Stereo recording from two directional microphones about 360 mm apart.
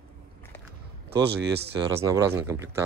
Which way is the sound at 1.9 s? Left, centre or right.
Centre.